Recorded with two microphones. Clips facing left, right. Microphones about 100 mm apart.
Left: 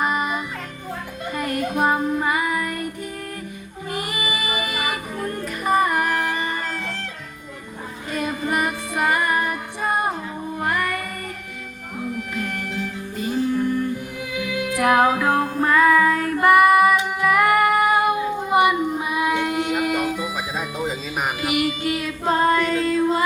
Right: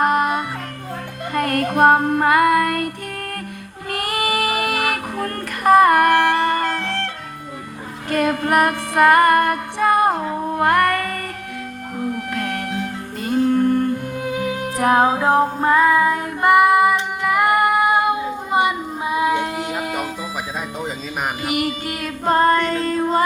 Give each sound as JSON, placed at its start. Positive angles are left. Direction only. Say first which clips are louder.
{"t": 0.0, "sound": "music", "louder": "right 5 dB", "side_deg": -60}
{"t": 3.9, "sound": "music", "louder": "right 6 dB", "side_deg": -65}
{"t": 8.1, "sound": "music", "louder": "right 7 dB", "side_deg": -65}
{"t": 21.4, "sound": "music", "louder": "left 2 dB", "side_deg": -45}